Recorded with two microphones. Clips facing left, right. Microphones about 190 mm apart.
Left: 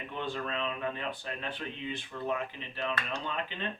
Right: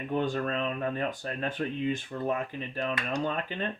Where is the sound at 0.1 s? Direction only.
45° right (ahead or behind).